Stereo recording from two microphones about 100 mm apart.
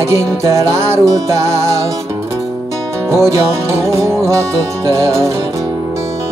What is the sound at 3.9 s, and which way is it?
Music, 30° right (ahead or behind).